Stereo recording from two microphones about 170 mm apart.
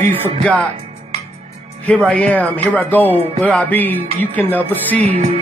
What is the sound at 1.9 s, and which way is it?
Speech, 5° left (ahead or behind).